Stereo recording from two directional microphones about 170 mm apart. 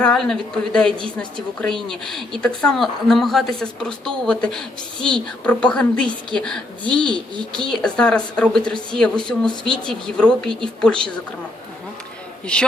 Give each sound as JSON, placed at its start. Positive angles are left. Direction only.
{"t": 0.0, "sound": "a woman's voice", "side_deg": 5}
{"t": 7.1, "sound": "speech", "side_deg": -25}
{"t": 7.6, "sound": "a woman's voice", "side_deg": 5}